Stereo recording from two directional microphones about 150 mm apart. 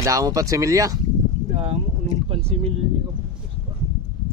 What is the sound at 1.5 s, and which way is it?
Boat, 45° right (ahead or behind).